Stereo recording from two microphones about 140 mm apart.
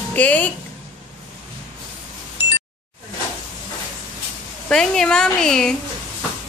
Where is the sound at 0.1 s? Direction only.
10° left (ahead or behind).